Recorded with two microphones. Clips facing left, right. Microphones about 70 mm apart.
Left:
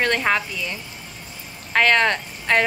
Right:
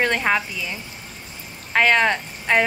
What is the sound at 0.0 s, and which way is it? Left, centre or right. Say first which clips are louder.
Speech: even; centre.